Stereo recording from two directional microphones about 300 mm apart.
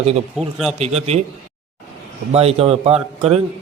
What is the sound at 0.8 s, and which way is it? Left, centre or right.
Speech, right.